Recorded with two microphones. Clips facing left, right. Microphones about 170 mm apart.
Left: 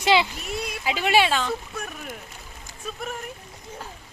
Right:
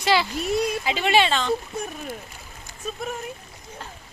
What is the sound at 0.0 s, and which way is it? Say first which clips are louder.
Speech: left 1 dB; 20° left (ahead or behind).